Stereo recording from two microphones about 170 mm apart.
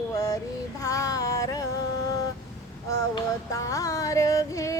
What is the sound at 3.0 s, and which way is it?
Music, 20° left (ahead or behind).